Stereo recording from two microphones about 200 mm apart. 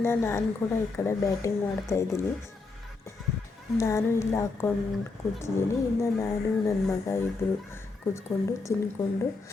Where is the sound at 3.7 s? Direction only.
15° left (ahead or behind).